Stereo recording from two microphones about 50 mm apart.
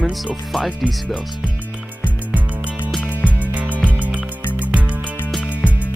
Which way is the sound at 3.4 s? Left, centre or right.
Right.